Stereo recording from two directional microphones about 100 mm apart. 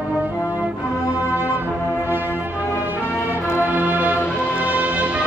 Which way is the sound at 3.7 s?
15° right (ahead or behind).